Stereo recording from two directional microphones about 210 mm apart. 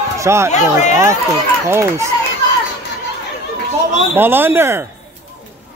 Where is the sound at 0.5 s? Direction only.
35° left (ahead or behind).